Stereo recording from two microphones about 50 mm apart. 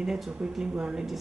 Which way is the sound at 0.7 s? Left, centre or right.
Centre.